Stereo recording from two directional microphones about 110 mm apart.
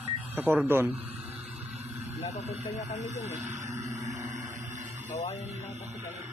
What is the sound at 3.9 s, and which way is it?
Vehicle, 90° right.